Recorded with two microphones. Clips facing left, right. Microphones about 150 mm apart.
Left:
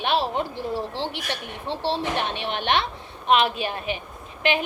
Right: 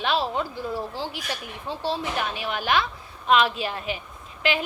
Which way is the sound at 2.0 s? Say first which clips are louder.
Left 2 dB; 25° left (ahead or behind).